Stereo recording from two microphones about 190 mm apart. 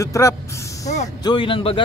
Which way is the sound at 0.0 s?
15° left (ahead or behind).